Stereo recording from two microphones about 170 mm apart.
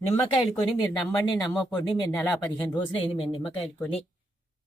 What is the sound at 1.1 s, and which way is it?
Speech, 20° left (ahead or behind).